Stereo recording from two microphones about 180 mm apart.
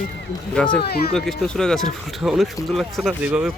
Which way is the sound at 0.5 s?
5° left (ahead or behind).